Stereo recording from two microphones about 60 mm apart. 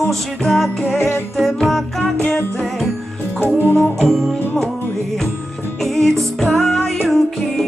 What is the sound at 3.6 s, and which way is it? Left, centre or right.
Music, left.